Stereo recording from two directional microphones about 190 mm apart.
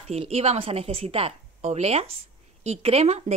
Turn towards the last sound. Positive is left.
turn(degrees=-35)  # may be behind; listen again after turning